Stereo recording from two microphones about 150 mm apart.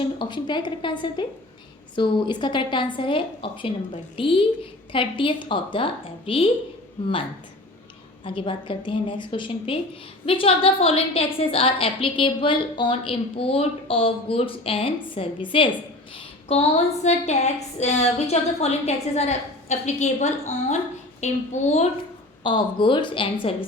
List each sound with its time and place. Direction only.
0.0 s a woman's voice: 30° left (ahead or behind)
8.2 s a woman's voice: 35° left (ahead or behind)
22.4 s a woman's voice: 35° left (ahead or behind)